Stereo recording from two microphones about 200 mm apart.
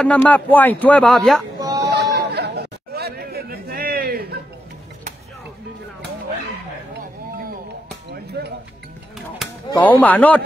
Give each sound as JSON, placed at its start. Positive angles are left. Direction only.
{"t": 0.0, "sound": "speech", "side_deg": 5}
{"t": 1.6, "sound": "chatter", "side_deg": -20}
{"t": 1.9, "sound": "chatter", "side_deg": -55}
{"t": 8.1, "sound": "a sound", "side_deg": -55}
{"t": 9.4, "sound": "chop", "side_deg": 0}
{"t": 9.8, "sound": "speech", "side_deg": 10}